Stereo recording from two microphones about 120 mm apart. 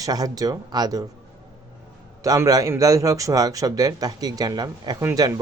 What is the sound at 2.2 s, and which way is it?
Speech, 30° right (ahead or behind).